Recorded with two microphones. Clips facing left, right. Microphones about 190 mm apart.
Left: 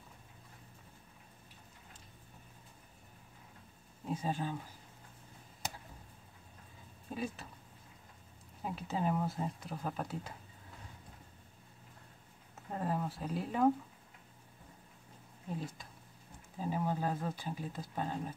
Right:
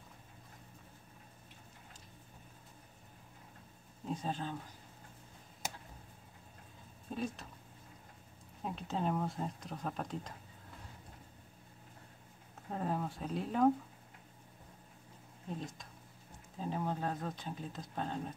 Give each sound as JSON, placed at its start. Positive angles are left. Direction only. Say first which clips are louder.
{"t": 4.1, "sound": "speech", "louder": "left 2 dB", "side_deg": 10}
{"t": 7.1, "sound": "speech", "louder": "even", "side_deg": 5}
{"t": 8.6, "sound": "speech", "louder": "left 1 dB", "side_deg": 5}
{"t": 12.7, "sound": "speech", "louder": "left 1 dB", "side_deg": 0}
{"t": 16.5, "sound": "speech", "louder": "left 2 dB", "side_deg": 5}